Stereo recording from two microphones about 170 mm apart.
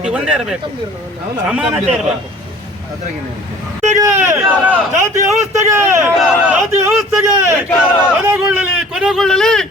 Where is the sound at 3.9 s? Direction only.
15° right (ahead or behind).